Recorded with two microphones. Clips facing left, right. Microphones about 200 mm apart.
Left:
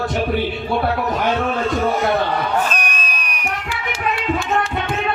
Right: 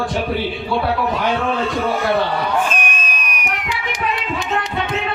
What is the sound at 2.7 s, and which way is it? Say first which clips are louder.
Crowd: right 1 dB; 40° left (ahead or behind).